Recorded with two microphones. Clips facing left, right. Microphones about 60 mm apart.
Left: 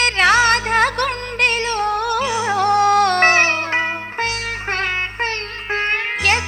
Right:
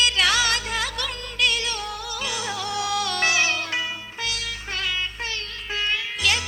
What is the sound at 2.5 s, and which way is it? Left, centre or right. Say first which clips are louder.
Music: left 14 dB; left.